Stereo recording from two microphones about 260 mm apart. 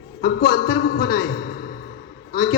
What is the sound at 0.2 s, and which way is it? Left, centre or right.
A man's voice, left.